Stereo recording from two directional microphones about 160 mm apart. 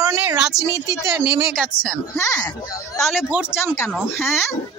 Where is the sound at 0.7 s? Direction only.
20° right (ahead or behind).